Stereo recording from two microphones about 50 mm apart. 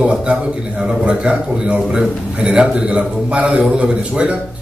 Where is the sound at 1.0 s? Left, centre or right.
Right.